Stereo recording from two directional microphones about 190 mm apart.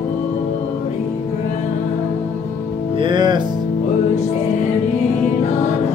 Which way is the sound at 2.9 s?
25° right (ahead or behind).